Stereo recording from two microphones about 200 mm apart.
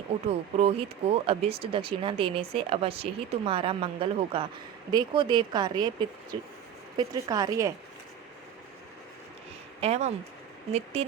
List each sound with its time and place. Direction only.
0.3 s speech: 30° right (ahead or behind)
6.9 s speech: 20° right (ahead or behind)
9.8 s speech: 30° right (ahead or behind)